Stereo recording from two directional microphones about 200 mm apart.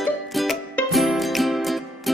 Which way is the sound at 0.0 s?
Centre (ahead or behind).